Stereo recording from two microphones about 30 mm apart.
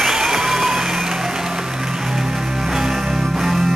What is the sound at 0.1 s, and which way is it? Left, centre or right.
Music, centre.